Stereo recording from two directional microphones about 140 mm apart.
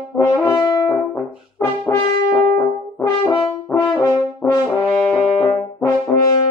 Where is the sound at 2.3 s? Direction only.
25° left (ahead or behind).